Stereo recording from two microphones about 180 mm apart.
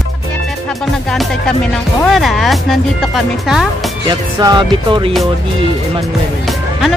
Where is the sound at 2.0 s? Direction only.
Centre (ahead or behind).